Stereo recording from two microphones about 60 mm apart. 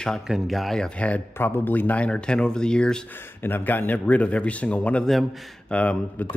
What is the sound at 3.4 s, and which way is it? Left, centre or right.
Speech, left.